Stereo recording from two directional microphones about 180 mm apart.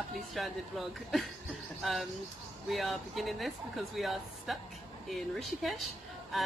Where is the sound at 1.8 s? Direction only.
Centre (ahead or behind).